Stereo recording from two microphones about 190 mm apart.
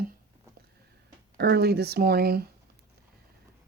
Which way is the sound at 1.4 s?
60° right (ahead or behind).